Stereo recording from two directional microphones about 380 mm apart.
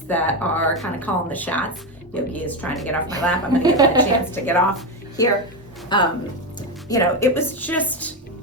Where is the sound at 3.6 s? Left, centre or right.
Centre.